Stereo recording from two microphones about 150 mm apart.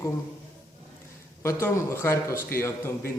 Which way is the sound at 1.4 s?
15° left (ahead or behind).